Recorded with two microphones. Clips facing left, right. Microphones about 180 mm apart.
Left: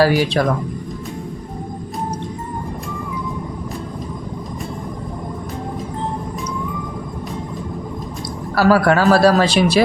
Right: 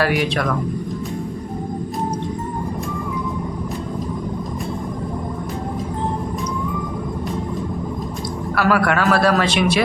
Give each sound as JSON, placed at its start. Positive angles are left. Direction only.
{"t": 0.0, "sound": "speech", "side_deg": 30}
{"t": 8.5, "sound": "speech", "side_deg": 35}